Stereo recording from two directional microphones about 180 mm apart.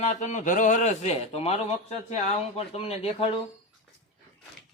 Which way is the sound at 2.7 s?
35° left (ahead or behind).